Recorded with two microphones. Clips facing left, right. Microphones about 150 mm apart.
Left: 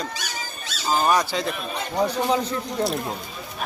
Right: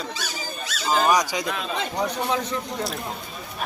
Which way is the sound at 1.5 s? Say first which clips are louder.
Right 1 dB; 90° right.